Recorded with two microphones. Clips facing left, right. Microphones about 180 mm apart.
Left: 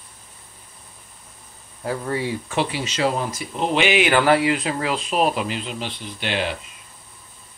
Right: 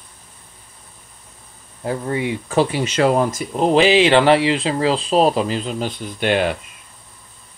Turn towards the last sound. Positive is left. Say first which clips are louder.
# right 7 dB
turn(degrees=-50)  # may be behind; listen again after turning